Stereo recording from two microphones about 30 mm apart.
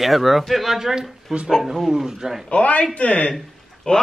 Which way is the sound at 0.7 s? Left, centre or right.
Centre.